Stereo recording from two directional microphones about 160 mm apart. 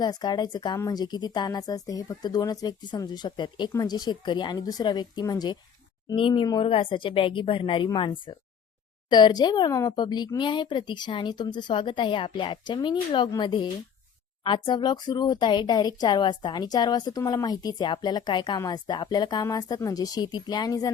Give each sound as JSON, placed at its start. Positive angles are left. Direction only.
{"t": 0.0, "sound": "speech", "side_deg": 25}